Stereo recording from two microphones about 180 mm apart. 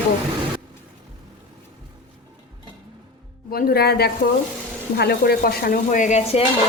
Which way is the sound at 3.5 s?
60° left (ahead or behind).